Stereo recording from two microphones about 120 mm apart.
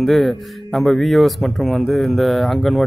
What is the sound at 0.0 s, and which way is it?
A man's voice, centre (ahead or behind).